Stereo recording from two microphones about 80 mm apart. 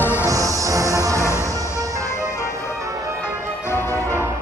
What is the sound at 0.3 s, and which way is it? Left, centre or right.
Music, right.